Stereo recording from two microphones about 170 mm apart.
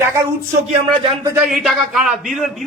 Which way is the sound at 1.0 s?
30° right (ahead or behind).